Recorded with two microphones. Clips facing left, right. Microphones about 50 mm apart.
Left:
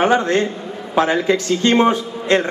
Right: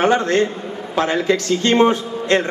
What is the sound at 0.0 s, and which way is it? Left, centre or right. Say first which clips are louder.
A man's voice: even; centre.